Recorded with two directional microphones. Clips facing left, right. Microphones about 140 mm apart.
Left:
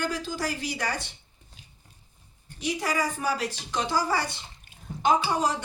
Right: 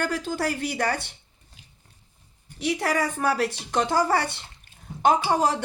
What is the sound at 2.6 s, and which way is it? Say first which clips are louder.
Speech: right 3 dB; 60° right (ahead or behind).